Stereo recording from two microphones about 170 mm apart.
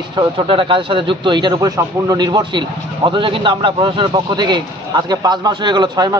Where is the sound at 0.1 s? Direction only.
30° right (ahead or behind).